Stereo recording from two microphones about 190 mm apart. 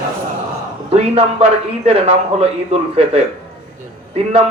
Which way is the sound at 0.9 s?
30° right (ahead or behind).